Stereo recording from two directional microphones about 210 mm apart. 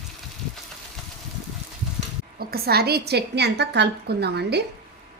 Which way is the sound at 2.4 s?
50° right (ahead or behind).